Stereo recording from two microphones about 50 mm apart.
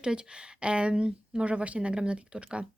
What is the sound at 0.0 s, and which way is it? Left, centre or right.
A woman's voice, centre.